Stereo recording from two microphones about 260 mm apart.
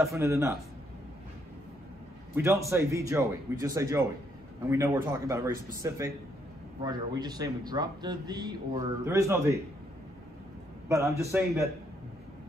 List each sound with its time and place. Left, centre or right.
0.0 s speech: centre
2.3 s speech: centre
10.9 s speech: centre